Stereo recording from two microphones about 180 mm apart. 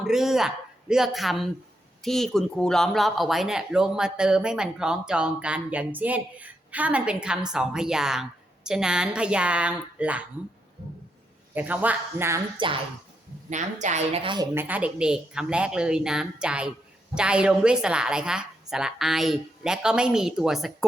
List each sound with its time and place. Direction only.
0.0 s speech: centre (ahead or behind)
11.5 s a man's voice: 10° right (ahead or behind)
12.5 s a woman's voice: 30° right (ahead or behind)
13.5 s speech: 40° right (ahead or behind)
14.5 s speech: 10° right (ahead or behind)